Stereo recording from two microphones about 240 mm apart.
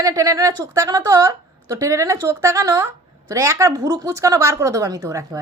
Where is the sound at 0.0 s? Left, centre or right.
Centre.